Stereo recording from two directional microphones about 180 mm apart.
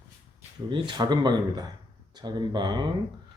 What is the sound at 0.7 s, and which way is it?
Speech, 25° right (ahead or behind).